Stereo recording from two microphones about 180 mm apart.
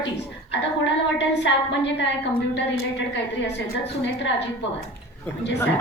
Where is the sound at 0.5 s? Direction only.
75° left (ahead or behind).